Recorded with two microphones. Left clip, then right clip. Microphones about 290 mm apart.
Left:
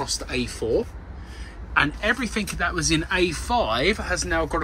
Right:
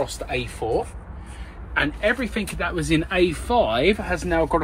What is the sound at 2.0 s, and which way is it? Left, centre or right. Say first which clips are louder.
Speech: right 1 dB; centre.